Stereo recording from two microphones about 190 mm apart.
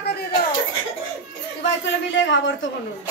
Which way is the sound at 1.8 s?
75° left (ahead or behind).